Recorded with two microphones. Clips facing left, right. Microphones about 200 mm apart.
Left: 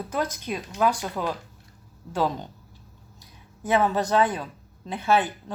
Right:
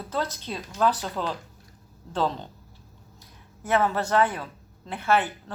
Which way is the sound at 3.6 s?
15° left (ahead or behind).